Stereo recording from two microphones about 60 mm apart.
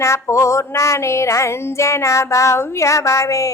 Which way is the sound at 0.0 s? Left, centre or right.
Left.